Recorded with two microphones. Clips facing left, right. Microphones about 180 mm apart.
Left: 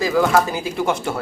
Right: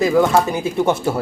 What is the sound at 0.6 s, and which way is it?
Speech, 25° right (ahead or behind).